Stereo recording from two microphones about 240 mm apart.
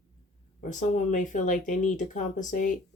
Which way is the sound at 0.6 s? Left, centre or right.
Left.